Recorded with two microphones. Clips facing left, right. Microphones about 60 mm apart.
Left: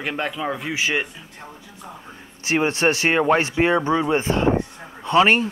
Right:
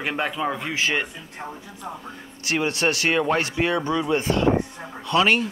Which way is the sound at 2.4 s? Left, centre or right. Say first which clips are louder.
Left 3 dB; left.